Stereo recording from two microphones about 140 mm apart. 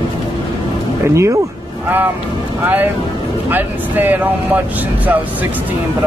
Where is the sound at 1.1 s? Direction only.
20° right (ahead or behind).